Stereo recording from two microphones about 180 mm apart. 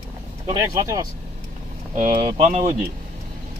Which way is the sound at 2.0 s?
40° right (ahead or behind).